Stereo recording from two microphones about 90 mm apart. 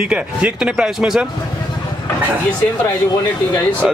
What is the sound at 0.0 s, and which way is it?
Speech, 10° right (ahead or behind).